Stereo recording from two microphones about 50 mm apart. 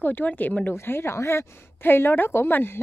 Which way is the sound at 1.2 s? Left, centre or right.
Left.